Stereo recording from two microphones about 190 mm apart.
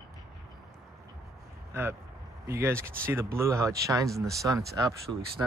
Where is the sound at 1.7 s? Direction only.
15° right (ahead or behind).